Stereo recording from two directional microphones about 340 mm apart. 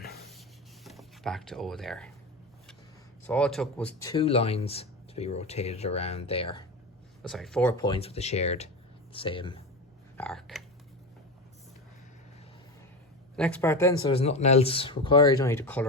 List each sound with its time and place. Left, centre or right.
0.0 s a sound: left
0.9 s speech: centre
3.2 s speech: centre
4.1 s speech: centre
7.2 s speech: centre
10.2 s a sound: centre
13.3 s speech: centre